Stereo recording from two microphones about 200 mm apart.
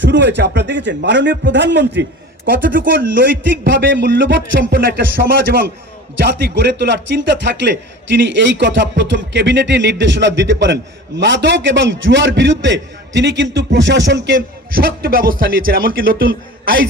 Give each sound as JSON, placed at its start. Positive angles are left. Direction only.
{"t": 0.0, "sound": "a man's voice", "side_deg": -60}
{"t": 2.7, "sound": "speech", "side_deg": -45}
{"t": 3.4, "sound": "a man's voice", "side_deg": -65}
{"t": 14.3, "sound": "speech", "side_deg": -50}